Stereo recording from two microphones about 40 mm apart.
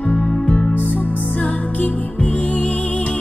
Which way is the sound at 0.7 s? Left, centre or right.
Left.